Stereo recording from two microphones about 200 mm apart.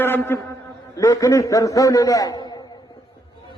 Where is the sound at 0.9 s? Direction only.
15° left (ahead or behind).